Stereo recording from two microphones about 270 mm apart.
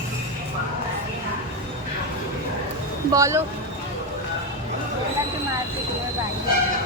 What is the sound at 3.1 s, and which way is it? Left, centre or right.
Speech, centre.